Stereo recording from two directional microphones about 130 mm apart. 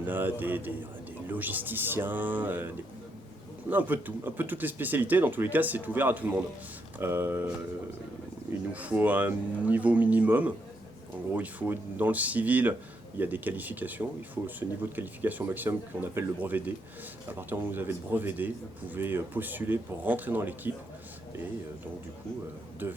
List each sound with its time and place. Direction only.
0.0 s speech: 15° right (ahead or behind)
8.7 s speech: 10° right (ahead or behind)
22.8 s speech: 15° right (ahead or behind)